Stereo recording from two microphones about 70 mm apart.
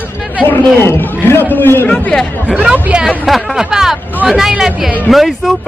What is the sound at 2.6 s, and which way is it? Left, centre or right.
A man's voice, centre.